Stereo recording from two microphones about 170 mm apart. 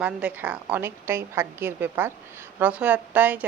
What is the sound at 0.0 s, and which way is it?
A woman's voice, 10° right (ahead or behind).